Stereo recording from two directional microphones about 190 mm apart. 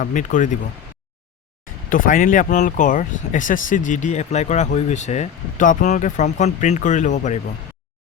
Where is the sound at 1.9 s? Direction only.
45° left (ahead or behind).